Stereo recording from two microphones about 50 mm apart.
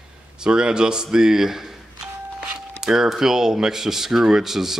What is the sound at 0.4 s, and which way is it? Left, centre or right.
Speech, centre.